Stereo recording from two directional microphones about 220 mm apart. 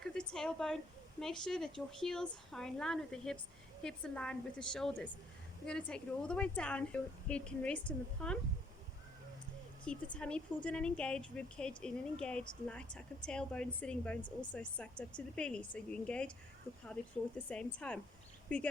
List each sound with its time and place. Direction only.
0.0 s a sound: 5° left (ahead or behind)
1.2 s a woman's voice: centre (ahead or behind)
9.8 s a woman's voice: 5° left (ahead or behind)
14.2 s speech: 20° left (ahead or behind)
14.5 s a woman's voice: 5° left (ahead or behind)